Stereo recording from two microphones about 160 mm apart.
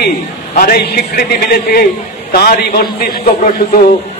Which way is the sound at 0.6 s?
65° left (ahead or behind).